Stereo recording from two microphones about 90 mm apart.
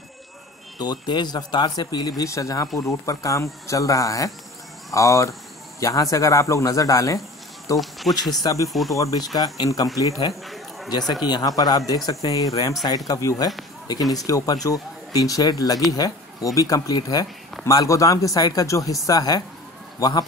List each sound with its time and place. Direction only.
0.7 s speech: 55° left (ahead or behind)
2.2 s speech: 35° left (ahead or behind)
8.1 s speech: 45° left (ahead or behind)
8.6 s speech: centre (ahead or behind)
8.9 s speech: 40° left (ahead or behind)
10.4 s a sound: centre (ahead or behind)
10.9 s speech: 50° left (ahead or behind)